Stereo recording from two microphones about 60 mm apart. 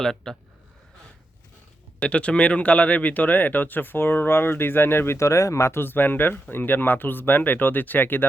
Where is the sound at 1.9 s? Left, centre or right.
Left.